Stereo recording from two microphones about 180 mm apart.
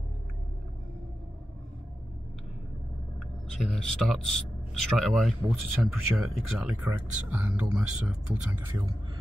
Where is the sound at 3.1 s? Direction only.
Centre (ahead or behind).